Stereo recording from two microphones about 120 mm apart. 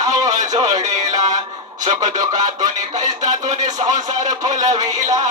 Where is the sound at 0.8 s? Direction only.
85° right.